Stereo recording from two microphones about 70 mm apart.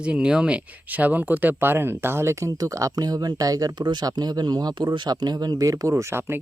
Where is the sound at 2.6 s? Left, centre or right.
Right.